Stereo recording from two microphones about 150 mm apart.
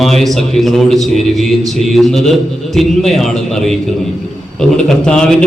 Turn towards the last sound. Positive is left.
turn(degrees=5)  # may be behind; listen again after turning